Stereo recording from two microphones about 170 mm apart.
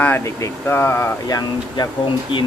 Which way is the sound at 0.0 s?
15° left (ahead or behind).